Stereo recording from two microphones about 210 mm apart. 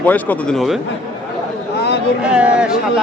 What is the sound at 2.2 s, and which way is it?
Speech, 5° right (ahead or behind).